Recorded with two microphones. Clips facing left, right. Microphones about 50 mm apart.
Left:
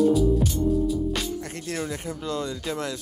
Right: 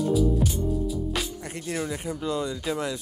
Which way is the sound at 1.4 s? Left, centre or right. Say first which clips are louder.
Even; centre.